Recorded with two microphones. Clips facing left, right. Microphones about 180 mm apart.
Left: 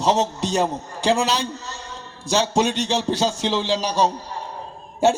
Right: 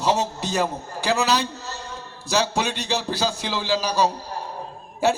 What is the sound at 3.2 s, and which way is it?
Speech, 25° left (ahead or behind).